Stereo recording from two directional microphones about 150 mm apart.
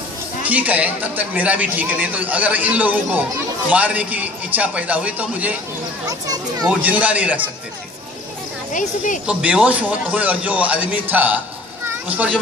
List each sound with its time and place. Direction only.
0.4 s a man's voice: 10° right (ahead or behind)
6.0 s a child's voice: 25° right (ahead or behind)
6.8 s a man's voice: 10° right (ahead or behind)
8.7 s speech: 60° left (ahead or behind)
9.2 s a man's voice: 5° right (ahead or behind)